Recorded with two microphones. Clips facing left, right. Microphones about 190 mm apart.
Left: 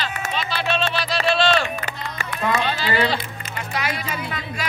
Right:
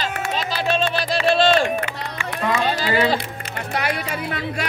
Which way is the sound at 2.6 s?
45° right (ahead or behind).